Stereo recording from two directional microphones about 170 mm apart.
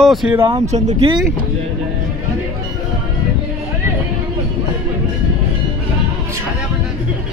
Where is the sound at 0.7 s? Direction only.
45° right (ahead or behind).